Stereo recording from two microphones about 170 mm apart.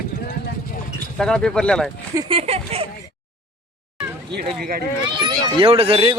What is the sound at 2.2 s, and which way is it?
Speech, 30° right (ahead or behind).